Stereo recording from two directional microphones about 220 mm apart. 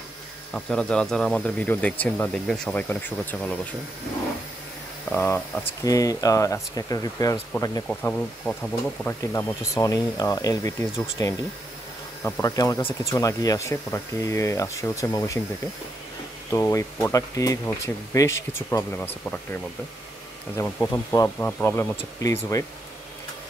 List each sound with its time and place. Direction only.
0.5 s speech: 5° left (ahead or behind)
5.1 s speech: 10° left (ahead or behind)
7.9 s speech: 5° left (ahead or behind)
16.4 s speech: 15° left (ahead or behind)